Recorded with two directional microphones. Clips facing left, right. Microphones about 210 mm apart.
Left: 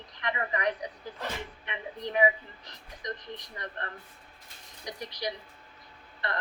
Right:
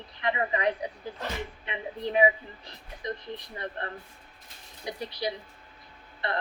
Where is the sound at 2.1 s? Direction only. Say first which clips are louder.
Right 2 dB; 20° right (ahead or behind).